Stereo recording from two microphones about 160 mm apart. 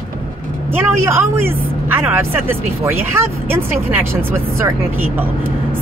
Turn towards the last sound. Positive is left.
turn(degrees=-15)  # may be behind; listen again after turning